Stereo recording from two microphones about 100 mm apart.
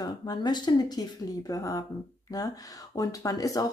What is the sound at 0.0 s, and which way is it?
Speech, 40° left (ahead or behind).